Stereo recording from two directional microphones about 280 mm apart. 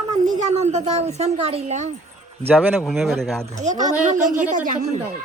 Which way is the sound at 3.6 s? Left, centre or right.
Right.